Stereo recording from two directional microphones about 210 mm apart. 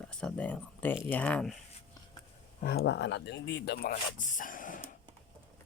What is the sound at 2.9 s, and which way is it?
Speech, 55° left (ahead or behind).